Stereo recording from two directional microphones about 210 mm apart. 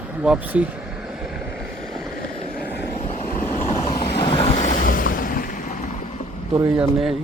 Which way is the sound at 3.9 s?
25° left (ahead or behind).